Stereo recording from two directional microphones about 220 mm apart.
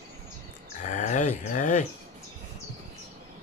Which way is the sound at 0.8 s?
35° left (ahead or behind).